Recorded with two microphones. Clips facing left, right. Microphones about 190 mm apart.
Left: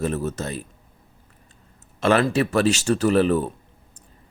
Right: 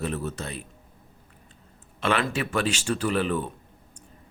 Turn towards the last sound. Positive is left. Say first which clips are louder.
# left 7 dB
turn(degrees=40)  # may be behind; listen again after turning